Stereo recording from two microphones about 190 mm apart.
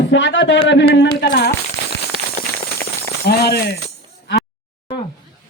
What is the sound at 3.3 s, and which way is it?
Speech, 55° left (ahead or behind).